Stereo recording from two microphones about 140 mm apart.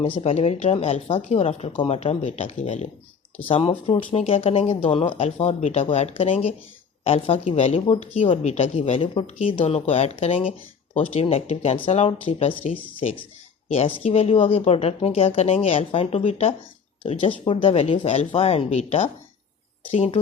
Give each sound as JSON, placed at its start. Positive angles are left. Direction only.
{"t": 0.0, "sound": "speech", "side_deg": 40}
{"t": 3.5, "sound": "speech", "side_deg": 40}